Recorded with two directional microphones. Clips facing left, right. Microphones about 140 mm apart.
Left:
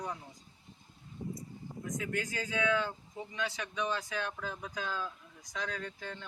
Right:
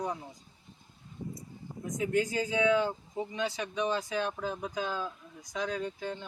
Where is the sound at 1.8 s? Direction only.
25° right (ahead or behind).